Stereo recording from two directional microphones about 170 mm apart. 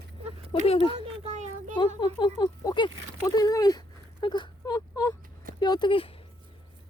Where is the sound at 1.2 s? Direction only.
45° right (ahead or behind).